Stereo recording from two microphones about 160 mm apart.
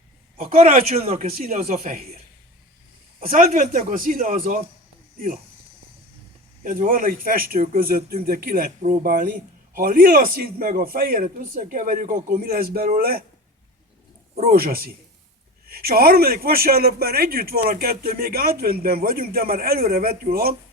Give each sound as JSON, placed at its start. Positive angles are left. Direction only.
{"t": 0.3, "sound": "a man's voice", "side_deg": -60}
{"t": 1.0, "sound": "a man's voice", "side_deg": -40}
{"t": 1.3, "sound": "a man's voice", "side_deg": -60}
{"t": 3.3, "sound": "a man's voice", "side_deg": -60}
{"t": 6.6, "sound": "a man's voice", "side_deg": -55}
{"t": 14.4, "sound": "a man's voice", "side_deg": -70}